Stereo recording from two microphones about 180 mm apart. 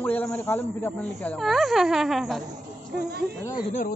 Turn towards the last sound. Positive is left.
turn(degrees=50)  # may be behind; listen again after turning